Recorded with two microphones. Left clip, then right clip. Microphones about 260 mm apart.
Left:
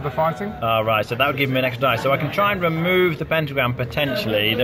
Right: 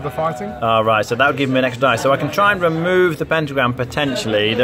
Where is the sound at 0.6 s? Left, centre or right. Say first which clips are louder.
Right 5 dB; right.